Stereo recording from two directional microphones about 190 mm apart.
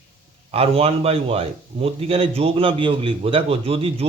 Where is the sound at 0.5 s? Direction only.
30° right (ahead or behind).